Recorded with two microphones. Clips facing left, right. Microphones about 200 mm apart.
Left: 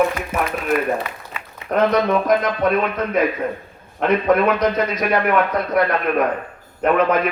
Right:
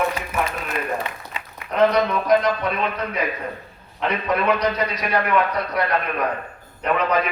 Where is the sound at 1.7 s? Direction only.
50° left (ahead or behind).